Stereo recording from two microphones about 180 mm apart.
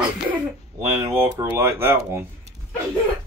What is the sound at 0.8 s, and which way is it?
Speech, 15° right (ahead or behind).